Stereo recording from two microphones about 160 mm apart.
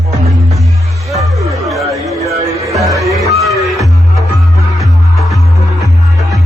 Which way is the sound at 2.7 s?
20° right (ahead or behind).